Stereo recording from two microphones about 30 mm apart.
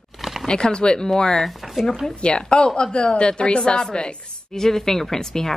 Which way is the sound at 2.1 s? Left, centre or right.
Left.